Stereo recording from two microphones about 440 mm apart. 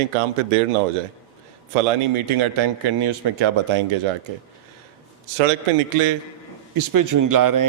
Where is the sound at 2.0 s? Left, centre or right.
Right.